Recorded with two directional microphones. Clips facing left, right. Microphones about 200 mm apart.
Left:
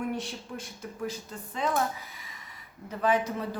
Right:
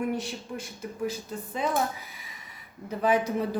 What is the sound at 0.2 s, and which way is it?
A woman's voice, 5° right (ahead or behind).